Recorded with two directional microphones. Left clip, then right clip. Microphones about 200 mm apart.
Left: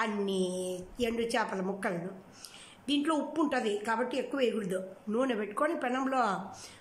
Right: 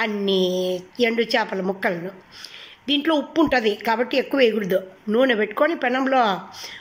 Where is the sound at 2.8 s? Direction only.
10° right (ahead or behind).